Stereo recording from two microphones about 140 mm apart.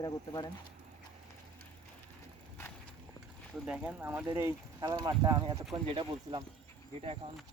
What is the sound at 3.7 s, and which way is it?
Speech, 5° right (ahead or behind).